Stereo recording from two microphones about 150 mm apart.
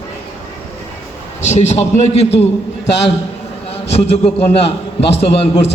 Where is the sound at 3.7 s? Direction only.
40° left (ahead or behind).